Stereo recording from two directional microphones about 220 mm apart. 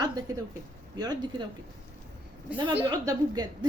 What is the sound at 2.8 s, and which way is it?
Speech, 20° right (ahead or behind).